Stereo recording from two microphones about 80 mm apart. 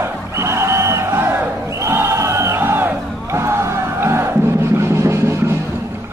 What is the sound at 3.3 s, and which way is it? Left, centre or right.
Music, right.